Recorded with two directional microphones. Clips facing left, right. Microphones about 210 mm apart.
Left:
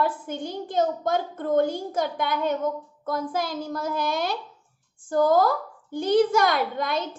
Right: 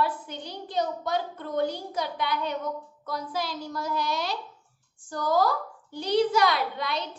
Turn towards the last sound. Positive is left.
turn(degrees=50)  # may be behind; listen again after turning